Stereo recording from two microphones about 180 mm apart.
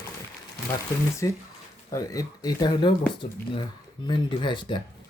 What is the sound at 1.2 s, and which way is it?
Speech, 15° left (ahead or behind).